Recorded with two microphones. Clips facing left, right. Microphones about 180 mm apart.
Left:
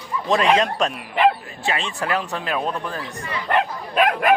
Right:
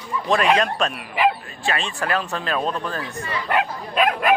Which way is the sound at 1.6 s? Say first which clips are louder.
Even; 20° left (ahead or behind).